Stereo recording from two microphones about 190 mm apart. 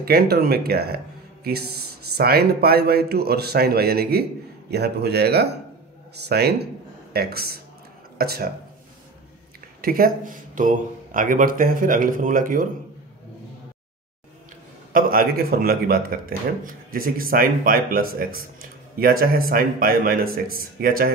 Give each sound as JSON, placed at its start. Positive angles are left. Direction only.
{"t": 0.0, "sound": "a man's voice", "side_deg": -55}
{"t": 9.8, "sound": "speech", "side_deg": -50}
{"t": 14.9, "sound": "speech", "side_deg": -50}